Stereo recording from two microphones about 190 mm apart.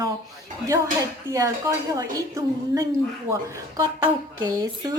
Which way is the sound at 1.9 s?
20° right (ahead or behind).